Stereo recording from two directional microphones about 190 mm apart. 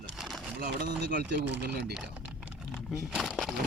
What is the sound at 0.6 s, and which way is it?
Speech, 55° right (ahead or behind).